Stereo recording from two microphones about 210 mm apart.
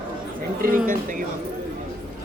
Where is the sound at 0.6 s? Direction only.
40° right (ahead or behind).